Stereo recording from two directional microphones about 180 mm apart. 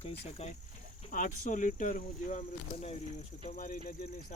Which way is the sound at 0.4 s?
35° left (ahead or behind).